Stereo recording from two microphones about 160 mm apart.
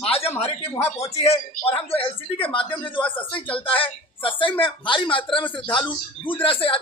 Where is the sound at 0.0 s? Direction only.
35° left (ahead or behind).